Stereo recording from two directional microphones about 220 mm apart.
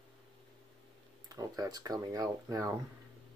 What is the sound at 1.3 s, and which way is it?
Speech, 15° right (ahead or behind).